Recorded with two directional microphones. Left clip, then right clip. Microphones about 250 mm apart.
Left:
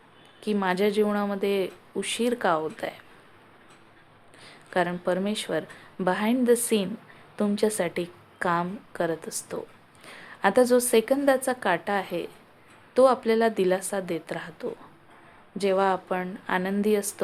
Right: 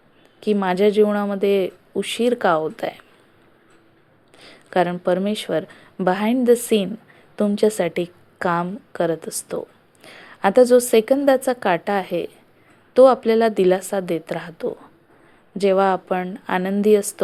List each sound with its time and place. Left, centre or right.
0.3 s a woman's voice: centre
4.4 s a woman's voice: centre